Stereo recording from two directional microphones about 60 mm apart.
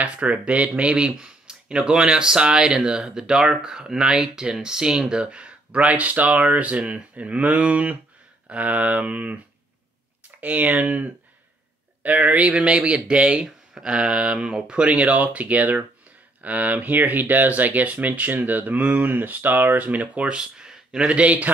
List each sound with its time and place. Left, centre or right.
0.0 s speech: right
10.4 s speech: right; by 21.1 s centre
21.1 s speech: right